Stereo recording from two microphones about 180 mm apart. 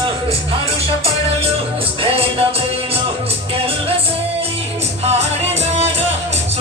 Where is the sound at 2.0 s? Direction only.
35° right (ahead or behind).